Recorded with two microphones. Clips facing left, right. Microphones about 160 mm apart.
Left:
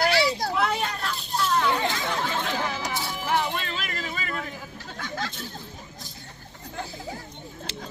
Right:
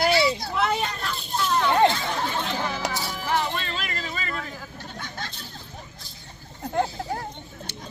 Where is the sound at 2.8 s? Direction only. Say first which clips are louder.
Right 2 dB; 70° right (ahead or behind).